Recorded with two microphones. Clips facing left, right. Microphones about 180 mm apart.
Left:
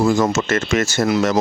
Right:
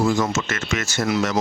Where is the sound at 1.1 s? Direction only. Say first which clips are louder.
Left 3 dB; 40° left (ahead or behind).